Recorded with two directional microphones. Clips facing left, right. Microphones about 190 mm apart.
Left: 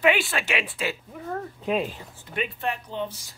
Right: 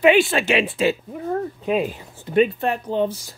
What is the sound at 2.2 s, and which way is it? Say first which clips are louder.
Speech: right 11 dB; 35° right (ahead or behind).